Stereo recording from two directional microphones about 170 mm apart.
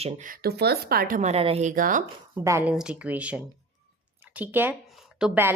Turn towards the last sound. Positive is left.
turn(degrees=-5)  # may be behind; listen again after turning